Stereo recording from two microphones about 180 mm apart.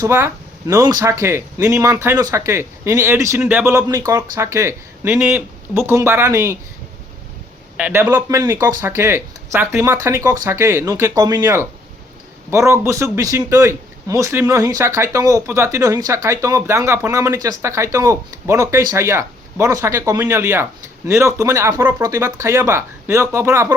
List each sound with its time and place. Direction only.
0.0 s a man's voice: 15° right (ahead or behind)
7.8 s a man's voice: 10° right (ahead or behind)